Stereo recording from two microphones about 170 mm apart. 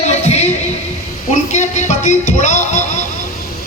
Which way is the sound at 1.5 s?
45° left (ahead or behind).